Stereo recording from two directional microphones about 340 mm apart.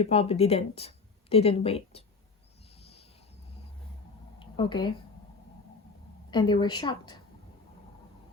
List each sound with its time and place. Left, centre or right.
0.0 s speech: centre
4.4 s a sound: centre
6.3 s a woman's voice: centre